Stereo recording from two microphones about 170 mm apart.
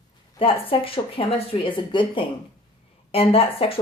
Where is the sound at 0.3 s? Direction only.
35° left (ahead or behind).